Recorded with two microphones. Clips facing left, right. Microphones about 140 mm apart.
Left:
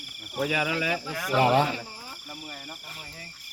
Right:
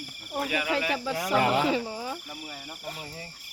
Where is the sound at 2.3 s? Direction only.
5° right (ahead or behind).